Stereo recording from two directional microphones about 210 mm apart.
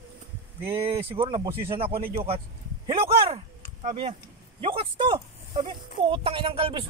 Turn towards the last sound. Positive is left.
turn(degrees=-25)  # may be behind; listen again after turning